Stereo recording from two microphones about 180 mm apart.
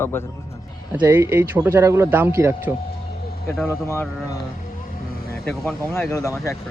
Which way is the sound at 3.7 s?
15° left (ahead or behind).